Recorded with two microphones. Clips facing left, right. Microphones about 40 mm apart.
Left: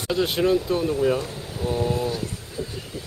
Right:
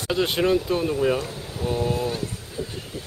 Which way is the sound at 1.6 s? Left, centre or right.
Centre.